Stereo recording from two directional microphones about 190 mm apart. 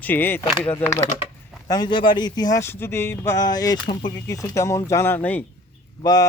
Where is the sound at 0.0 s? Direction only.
10° left (ahead or behind).